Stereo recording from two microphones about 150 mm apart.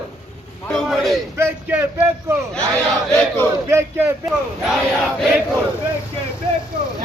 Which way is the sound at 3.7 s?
15° right (ahead or behind).